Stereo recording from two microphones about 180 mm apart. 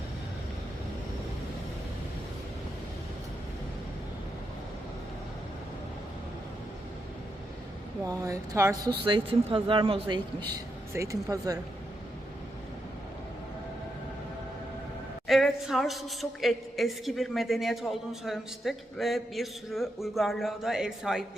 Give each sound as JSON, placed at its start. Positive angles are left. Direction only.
{"t": 8.0, "sound": "speech", "side_deg": -15}
{"t": 9.0, "sound": "speech", "side_deg": -30}
{"t": 10.5, "sound": "speech", "side_deg": -15}
{"t": 15.3, "sound": "a woman's voice", "side_deg": 0}